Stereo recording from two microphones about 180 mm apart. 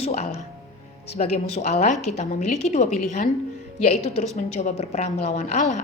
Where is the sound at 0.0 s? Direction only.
35° left (ahead or behind).